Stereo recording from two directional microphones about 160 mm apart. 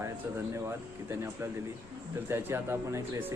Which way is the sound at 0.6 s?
15° right (ahead or behind).